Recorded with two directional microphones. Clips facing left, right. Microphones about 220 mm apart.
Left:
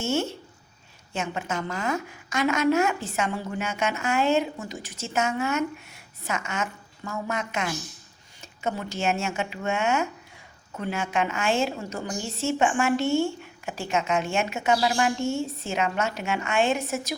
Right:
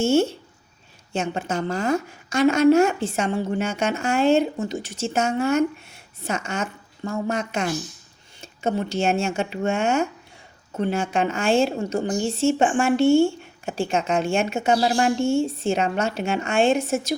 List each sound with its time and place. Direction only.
0.0 s a woman's voice: 30° right (ahead or behind)